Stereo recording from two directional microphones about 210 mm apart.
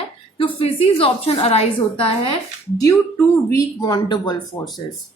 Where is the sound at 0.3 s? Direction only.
25° left (ahead or behind).